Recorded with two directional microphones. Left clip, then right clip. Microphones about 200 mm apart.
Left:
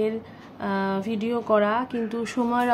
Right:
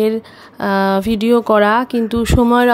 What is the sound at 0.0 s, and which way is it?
A woman's voice, 55° right (ahead or behind).